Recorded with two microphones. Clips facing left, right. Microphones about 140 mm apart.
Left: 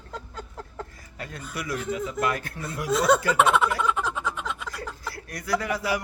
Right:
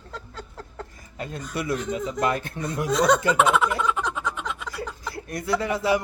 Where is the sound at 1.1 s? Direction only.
25° right (ahead or behind).